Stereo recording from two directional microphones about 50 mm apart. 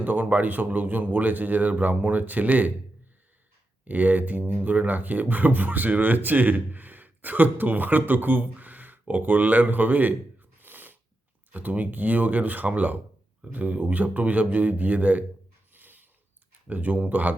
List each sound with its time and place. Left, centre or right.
0.0 s speech: right
3.8 s speech: right
10.6 s sneeze: right
11.5 s speech: right
15.7 s a sound: right
16.6 s speech: right